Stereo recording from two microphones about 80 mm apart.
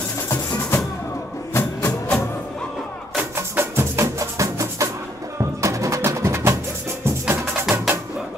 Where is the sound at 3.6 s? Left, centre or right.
Right.